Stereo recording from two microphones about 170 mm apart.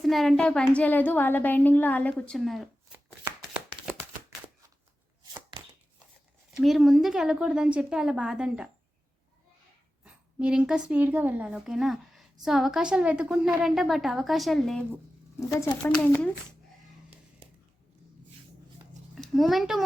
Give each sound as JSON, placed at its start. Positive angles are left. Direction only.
{"t": 0.0, "sound": "a woman's voice", "side_deg": 0}
{"t": 6.6, "sound": "a woman's voice", "side_deg": 0}
{"t": 10.0, "sound": "a woman's voice", "side_deg": -5}
{"t": 15.4, "sound": "speech", "side_deg": 20}
{"t": 15.8, "sound": "a woman's voice", "side_deg": 5}
{"t": 19.1, "sound": "a child's voice", "side_deg": 0}